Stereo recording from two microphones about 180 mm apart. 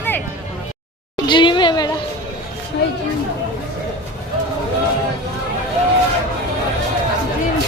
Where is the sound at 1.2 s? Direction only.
25° left (ahead or behind).